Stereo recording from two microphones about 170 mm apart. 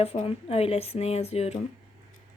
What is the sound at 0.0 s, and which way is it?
Speech, 35° left (ahead or behind).